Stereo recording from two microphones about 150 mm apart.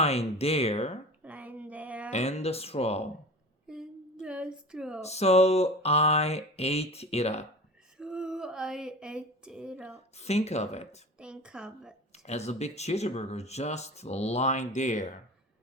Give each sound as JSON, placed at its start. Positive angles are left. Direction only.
{"t": 0.0, "sound": "speech", "side_deg": 45}
{"t": 1.2, "sound": "a sound", "side_deg": -10}
{"t": 2.0, "sound": "speech", "side_deg": 50}
{"t": 3.7, "sound": "a sound", "side_deg": -5}
{"t": 4.9, "sound": "speech", "side_deg": 45}
{"t": 7.9, "sound": "speech", "side_deg": -5}
{"t": 10.2, "sound": "speech", "side_deg": 45}
{"t": 11.2, "sound": "a woman's voice", "side_deg": -5}
{"t": 12.1, "sound": "speech", "side_deg": 45}